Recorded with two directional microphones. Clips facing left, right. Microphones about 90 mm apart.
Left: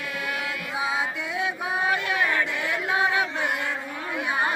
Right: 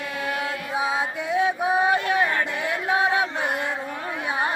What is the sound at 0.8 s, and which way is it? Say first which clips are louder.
Music: right 2 dB; 25° right (ahead or behind).